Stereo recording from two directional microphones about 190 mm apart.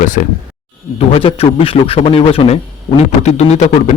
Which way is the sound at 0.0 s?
45° left (ahead or behind).